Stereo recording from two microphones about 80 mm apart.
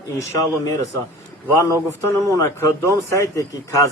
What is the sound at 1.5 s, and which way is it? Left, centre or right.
Speech, left.